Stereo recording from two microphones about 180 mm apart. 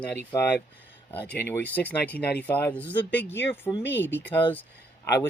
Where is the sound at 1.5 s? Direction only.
10° left (ahead or behind).